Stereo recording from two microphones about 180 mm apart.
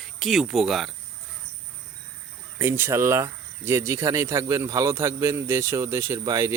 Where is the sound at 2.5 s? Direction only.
15° right (ahead or behind).